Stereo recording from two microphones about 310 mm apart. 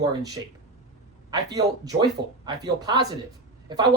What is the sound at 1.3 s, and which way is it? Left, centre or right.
Speech, centre.